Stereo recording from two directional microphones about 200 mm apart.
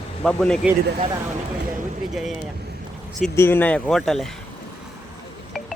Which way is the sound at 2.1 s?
Centre (ahead or behind).